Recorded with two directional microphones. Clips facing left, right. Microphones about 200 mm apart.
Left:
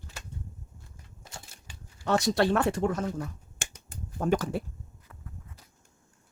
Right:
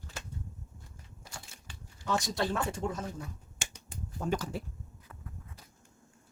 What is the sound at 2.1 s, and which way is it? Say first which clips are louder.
Speech: left 7 dB; 70° left (ahead or behind).